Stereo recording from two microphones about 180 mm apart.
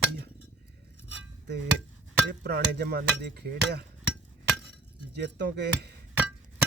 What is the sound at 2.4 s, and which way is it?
Speech, 60° right (ahead or behind).